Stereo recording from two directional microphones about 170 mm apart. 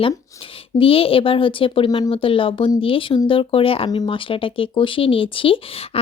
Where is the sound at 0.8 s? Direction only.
35° left (ahead or behind).